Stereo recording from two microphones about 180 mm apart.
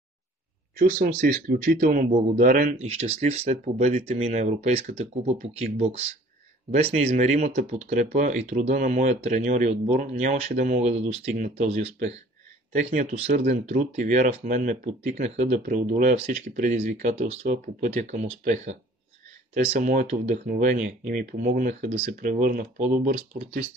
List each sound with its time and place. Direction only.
0.7 s speech: 50° right (ahead or behind)
2.9 s speech: 35° right (ahead or behind)
15.6 s speech: 50° right (ahead or behind)
19.9 s speech: 45° right (ahead or behind)